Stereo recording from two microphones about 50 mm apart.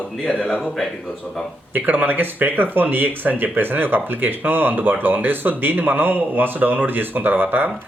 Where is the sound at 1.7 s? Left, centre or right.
Right.